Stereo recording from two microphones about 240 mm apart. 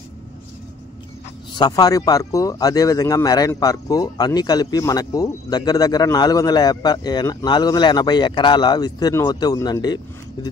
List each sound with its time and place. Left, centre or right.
1.5 s speech: centre